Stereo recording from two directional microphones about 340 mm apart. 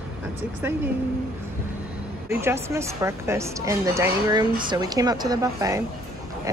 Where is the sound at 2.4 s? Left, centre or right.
Centre.